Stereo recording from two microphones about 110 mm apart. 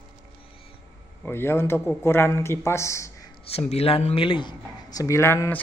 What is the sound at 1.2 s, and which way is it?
Speech, 20° left (ahead or behind).